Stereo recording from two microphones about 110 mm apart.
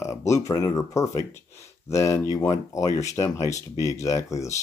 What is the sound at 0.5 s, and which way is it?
Speech, 35° left (ahead or behind).